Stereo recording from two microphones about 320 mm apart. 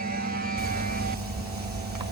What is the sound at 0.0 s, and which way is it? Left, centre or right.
Music, right.